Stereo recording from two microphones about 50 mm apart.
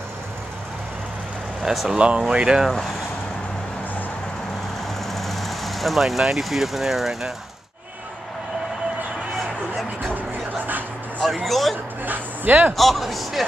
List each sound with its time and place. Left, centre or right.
1.6 s a man's voice: centre
2.0 s speech: centre
5.0 s speech: centre
9.4 s music: centre
11.4 s a man's voice: centre
12.0 s speech: right
12.7 s a man's voice: centre